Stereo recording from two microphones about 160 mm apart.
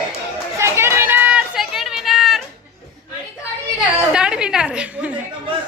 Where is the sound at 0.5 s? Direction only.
15° right (ahead or behind).